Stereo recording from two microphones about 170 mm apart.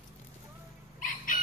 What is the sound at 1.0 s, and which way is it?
Chicken, 50° left (ahead or behind).